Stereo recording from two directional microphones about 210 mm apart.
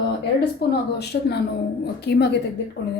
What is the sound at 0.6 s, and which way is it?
A woman's voice, 50° left (ahead or behind).